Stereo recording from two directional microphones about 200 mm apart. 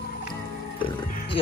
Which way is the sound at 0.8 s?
25° left (ahead or behind).